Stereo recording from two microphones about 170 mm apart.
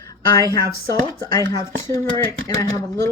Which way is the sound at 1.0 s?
25° left (ahead or behind).